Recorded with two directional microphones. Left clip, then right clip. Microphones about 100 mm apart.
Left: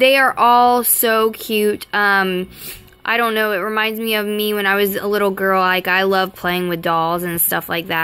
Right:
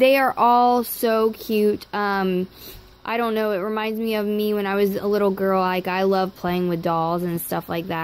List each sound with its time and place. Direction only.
0.0 s speech: 45° right (ahead or behind)
0.3 s speech: 30° right (ahead or behind)